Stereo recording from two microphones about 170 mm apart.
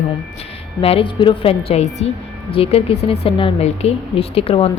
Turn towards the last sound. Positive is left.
turn(degrees=35)  # may be behind; listen again after turning